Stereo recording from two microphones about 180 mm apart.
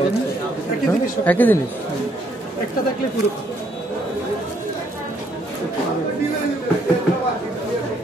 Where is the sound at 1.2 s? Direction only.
10° left (ahead or behind).